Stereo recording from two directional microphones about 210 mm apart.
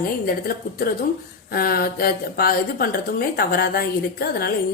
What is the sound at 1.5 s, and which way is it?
A woman's voice, 45° left (ahead or behind).